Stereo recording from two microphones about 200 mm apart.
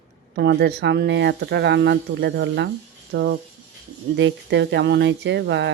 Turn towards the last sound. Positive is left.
turn(degrees=-60)  # may be behind; listen again after turning